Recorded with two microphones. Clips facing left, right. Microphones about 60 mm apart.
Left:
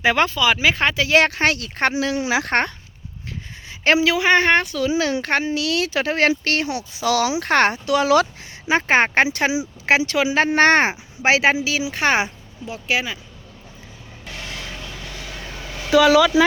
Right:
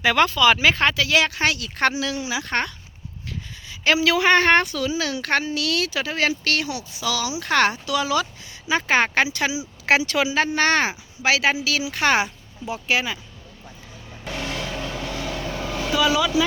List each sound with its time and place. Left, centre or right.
0.0 s speech: left
1.1 s speech: left
2.2 s speech: left
2.5 s speech: left
3.7 s a sound: left
4.0 s speech: centre
4.8 s a woman's voice: left
5.9 s speech: left
6.4 s speech: left
8.0 s speech: left
8.7 s a woman's voice: left
10.2 s speech: left
12.6 s speech: centre
15.9 s speech: left